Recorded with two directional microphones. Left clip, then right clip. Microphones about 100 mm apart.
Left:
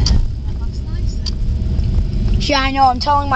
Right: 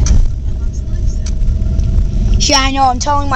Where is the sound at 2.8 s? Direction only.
30° right (ahead or behind).